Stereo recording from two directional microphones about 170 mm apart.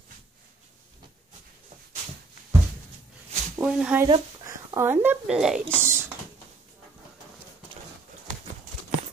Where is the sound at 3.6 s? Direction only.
5° right (ahead or behind).